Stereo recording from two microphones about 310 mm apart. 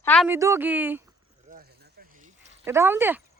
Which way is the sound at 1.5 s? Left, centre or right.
Right.